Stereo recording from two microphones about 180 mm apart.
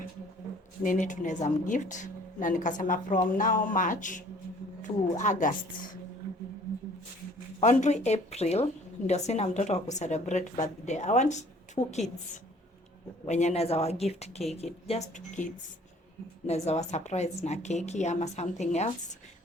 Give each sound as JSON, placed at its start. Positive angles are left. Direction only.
{"t": 0.8, "sound": "speech", "side_deg": 45}
{"t": 7.6, "sound": "a woman's voice", "side_deg": 40}
{"t": 13.2, "sound": "a woman's voice", "side_deg": 40}
{"t": 16.6, "sound": "a woman's voice", "side_deg": 40}